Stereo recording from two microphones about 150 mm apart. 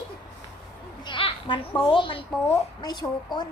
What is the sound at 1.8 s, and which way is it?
Speech, 35° left (ahead or behind).